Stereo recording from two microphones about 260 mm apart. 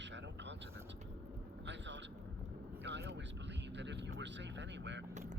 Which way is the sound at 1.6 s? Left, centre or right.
Right.